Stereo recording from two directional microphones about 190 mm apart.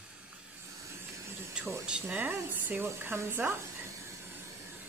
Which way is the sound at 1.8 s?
5° right (ahead or behind).